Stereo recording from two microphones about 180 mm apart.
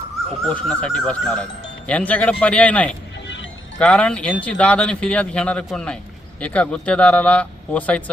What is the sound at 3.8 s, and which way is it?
A man's voice, 5° left (ahead or behind).